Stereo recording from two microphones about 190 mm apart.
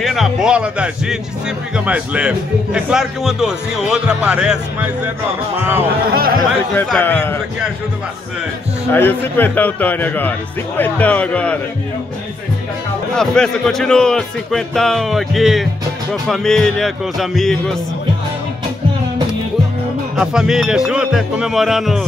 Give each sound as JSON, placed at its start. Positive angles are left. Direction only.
{"t": 0.0, "sound": "speech", "side_deg": 0}
{"t": 6.1, "sound": "speech", "side_deg": -50}
{"t": 6.7, "sound": "a man's voice", "side_deg": 10}
{"t": 8.9, "sound": "a man's voice", "side_deg": 10}
{"t": 13.1, "sound": "speech", "side_deg": 5}
{"t": 20.2, "sound": "speech", "side_deg": -5}